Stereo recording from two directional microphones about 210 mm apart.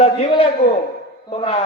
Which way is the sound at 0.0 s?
25° left (ahead or behind).